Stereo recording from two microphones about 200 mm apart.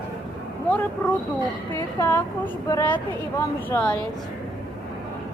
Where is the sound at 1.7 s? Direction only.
10° left (ahead or behind).